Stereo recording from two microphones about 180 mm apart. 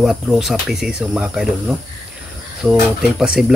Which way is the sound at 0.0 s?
Centre (ahead or behind).